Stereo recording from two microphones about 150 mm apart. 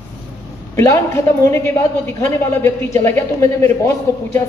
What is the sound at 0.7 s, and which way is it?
A man's voice, 20° left (ahead or behind).